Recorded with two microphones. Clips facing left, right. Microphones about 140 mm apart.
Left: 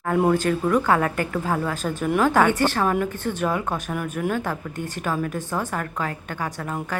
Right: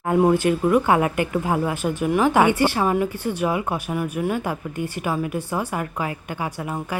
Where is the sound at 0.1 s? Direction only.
15° right (ahead or behind).